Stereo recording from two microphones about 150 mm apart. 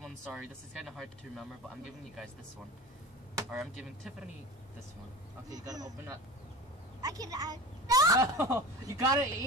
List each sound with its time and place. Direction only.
0.0 s a sound: centre (ahead or behind)
0.8 s speech: centre (ahead or behind)
5.5 s a woman's voice: 25° right (ahead or behind)